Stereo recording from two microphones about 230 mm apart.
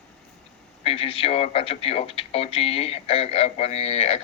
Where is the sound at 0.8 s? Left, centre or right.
Left.